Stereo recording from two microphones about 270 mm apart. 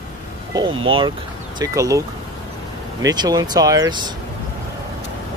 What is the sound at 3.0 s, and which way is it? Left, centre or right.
Speech, centre.